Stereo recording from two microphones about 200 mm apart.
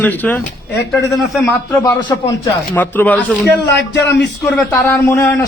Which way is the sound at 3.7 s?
60° left (ahead or behind).